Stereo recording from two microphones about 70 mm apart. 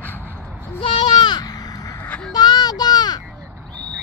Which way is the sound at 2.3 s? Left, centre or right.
Left.